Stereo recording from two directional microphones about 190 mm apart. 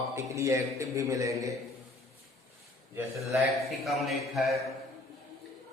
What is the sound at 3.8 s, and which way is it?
Speech, centre (ahead or behind).